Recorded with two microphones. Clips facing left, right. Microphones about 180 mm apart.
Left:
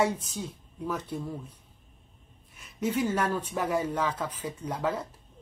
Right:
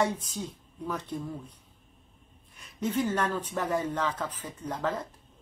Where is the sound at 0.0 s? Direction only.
10° left (ahead or behind).